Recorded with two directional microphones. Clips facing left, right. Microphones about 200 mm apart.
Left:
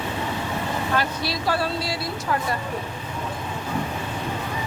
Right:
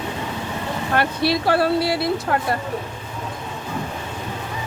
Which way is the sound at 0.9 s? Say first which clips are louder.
Right 9 dB; 60° right (ahead or behind).